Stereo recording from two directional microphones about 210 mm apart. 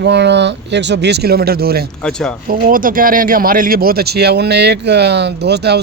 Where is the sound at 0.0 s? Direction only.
55° right (ahead or behind).